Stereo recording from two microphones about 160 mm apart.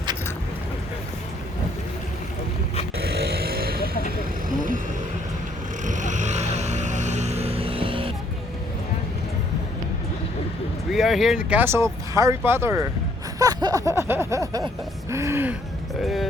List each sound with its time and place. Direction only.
3.2 s vehicle: 75° right (ahead or behind)
4.4 s vehicle: 55° right (ahead or behind)
5.8 s music: 50° right (ahead or behind); by 8.1 s 35° right (ahead or behind)
10.9 s speech: centre (ahead or behind)
13.4 s a sound: 25° right (ahead or behind)
15.1 s speech: 15° right (ahead or behind)
16.0 s speech: centre (ahead or behind)